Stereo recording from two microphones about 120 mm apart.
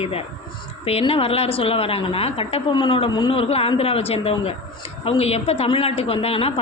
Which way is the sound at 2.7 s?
40° left (ahead or behind).